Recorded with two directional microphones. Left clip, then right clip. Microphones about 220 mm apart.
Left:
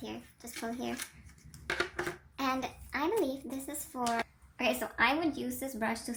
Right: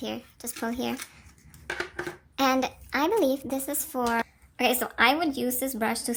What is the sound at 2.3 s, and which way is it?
A child's voice, 35° right (ahead or behind).